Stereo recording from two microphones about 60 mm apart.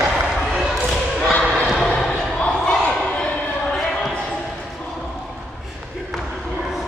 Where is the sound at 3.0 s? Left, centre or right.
Left; by 4.3 s centre.